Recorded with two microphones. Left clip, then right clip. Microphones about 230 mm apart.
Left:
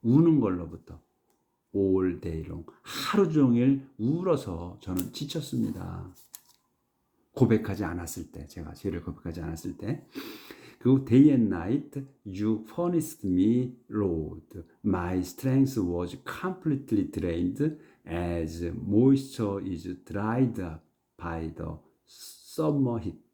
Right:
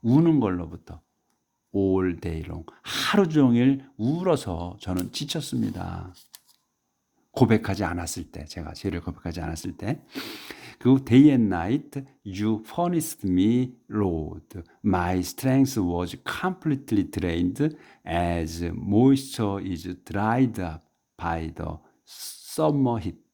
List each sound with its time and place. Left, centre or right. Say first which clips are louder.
0.0 s speech: right 2 dB; right
7.3 s speech: right 4 dB; right